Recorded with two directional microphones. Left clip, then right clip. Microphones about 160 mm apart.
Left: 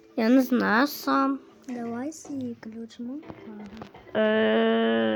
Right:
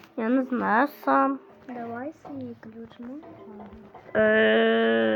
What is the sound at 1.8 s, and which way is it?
A woman's voice, 90° left.